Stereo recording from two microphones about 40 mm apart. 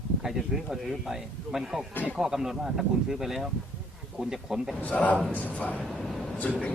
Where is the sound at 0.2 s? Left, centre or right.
Centre.